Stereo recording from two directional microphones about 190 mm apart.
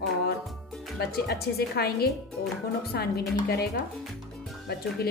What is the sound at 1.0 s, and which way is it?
A woman's voice, 55° left (ahead or behind).